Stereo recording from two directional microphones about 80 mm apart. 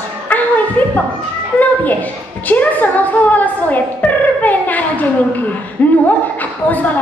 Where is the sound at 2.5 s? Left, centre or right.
Centre.